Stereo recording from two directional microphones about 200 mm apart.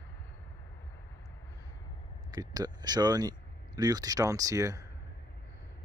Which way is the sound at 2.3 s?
20° right (ahead or behind).